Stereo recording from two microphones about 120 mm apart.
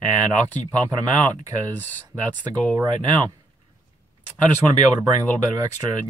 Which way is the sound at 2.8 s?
35° right (ahead or behind).